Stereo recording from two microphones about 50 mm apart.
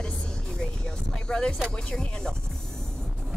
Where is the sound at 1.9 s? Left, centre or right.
Centre.